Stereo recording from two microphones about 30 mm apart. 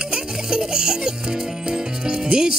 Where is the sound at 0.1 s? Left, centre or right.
Right.